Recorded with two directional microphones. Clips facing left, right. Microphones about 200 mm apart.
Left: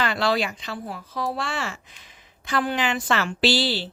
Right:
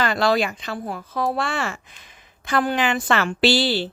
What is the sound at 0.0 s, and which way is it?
Speech, 45° right (ahead or behind).